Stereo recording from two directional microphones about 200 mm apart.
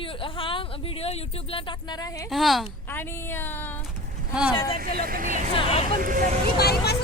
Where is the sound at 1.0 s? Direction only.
25° left (ahead or behind).